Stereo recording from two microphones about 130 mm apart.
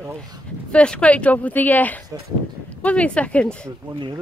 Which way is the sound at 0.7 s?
10° left (ahead or behind).